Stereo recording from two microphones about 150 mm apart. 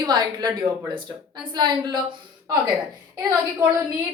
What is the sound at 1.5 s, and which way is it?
Speech, 30° right (ahead or behind).